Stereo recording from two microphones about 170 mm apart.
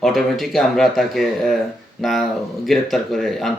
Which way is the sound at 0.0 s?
Centre (ahead or behind).